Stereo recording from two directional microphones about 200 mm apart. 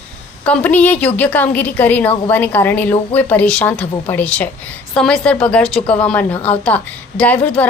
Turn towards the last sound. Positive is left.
turn(degrees=5)  # may be behind; listen again after turning